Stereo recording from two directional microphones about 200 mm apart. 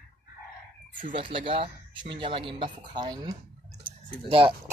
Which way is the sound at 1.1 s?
25° right (ahead or behind).